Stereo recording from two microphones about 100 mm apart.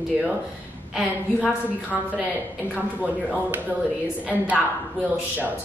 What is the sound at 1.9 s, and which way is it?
A woman's voice, 10° right (ahead or behind).